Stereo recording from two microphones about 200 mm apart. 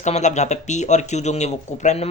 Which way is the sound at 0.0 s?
35° left (ahead or behind).